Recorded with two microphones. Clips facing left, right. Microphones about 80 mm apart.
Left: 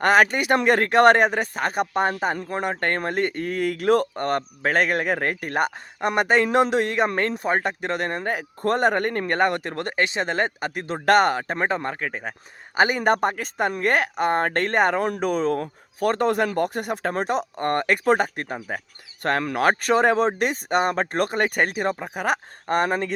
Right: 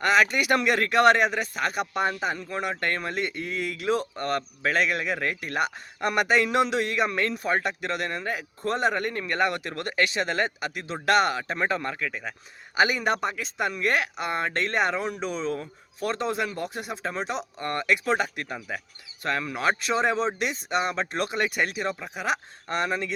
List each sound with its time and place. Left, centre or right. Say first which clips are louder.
0.0 s speech: left 4 dB; left
0.3 s a man's voice: left 4 dB; left
4.1 s a man's voice: left 4 dB; left
6.0 s a man's voice: left 3 dB; left
19.2 s speech: left 5 dB; left